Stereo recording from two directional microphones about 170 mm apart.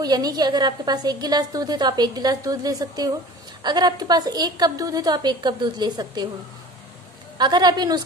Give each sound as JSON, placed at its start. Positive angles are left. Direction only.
{"t": 0.0, "sound": "a woman's voice", "side_deg": -25}
{"t": 7.3, "sound": "a woman's voice", "side_deg": -25}